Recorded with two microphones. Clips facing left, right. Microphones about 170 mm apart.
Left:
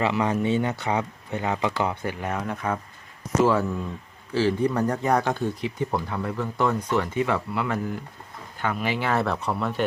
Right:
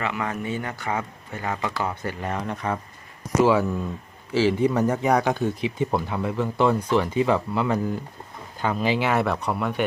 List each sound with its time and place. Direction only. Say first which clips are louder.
0.0 s speech: left 5 dB; 30° left (ahead or behind)
2.0 s speech: even; 5° left (ahead or behind)
5.0 s speech: right 2 dB; 15° right (ahead or behind)
6.7 s speech: right 3 dB; 10° right (ahead or behind)
7.1 s speech: right 3 dB; 25° right (ahead or behind)
9.1 s speech: right 1 dB; centre (ahead or behind)